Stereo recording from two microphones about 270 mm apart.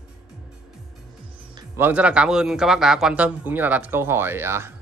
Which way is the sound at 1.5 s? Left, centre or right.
Centre.